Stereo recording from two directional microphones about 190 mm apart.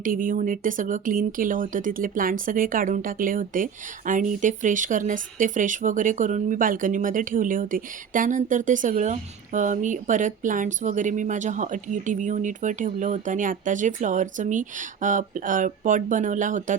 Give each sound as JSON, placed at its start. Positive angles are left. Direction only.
{"t": 0.0, "sound": "speech", "side_deg": -45}